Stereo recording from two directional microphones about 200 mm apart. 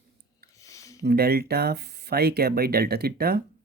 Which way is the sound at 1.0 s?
50° right (ahead or behind).